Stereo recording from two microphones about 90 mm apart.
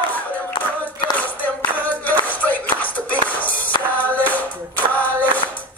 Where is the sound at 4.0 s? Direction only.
20° left (ahead or behind).